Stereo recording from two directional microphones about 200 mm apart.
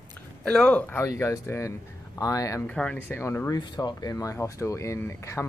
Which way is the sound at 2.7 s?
5° left (ahead or behind).